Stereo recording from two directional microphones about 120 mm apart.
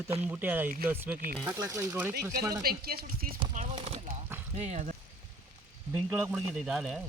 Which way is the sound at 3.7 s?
50° right (ahead or behind).